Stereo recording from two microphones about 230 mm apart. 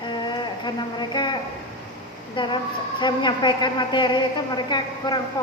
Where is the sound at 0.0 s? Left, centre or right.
Centre.